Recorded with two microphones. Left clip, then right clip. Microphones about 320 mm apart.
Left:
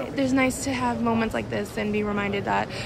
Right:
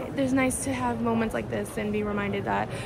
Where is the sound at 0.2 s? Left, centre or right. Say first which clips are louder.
Left 2 dB; centre.